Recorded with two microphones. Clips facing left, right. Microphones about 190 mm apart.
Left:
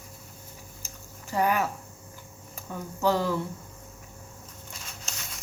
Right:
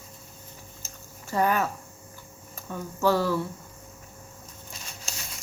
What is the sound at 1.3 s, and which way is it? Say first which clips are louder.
Speech: right 1 dB; 15° left (ahead or behind).